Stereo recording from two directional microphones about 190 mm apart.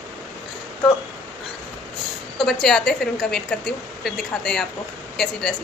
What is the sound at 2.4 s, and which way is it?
Speech, centre (ahead or behind).